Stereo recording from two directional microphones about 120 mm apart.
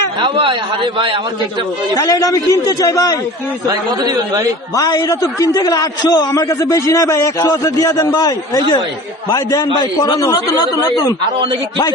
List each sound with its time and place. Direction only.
0.2 s a man's voice: 45° right (ahead or behind)
2.0 s a man's voice: 30° left (ahead or behind)
3.7 s speech: 30° right (ahead or behind)
4.7 s a man's voice: 30° left (ahead or behind)